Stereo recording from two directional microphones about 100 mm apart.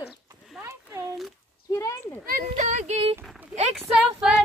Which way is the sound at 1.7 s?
35° left (ahead or behind).